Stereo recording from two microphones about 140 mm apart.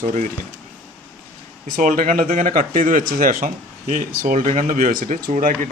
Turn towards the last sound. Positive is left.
turn(degrees=-70)  # may be behind; listen again after turning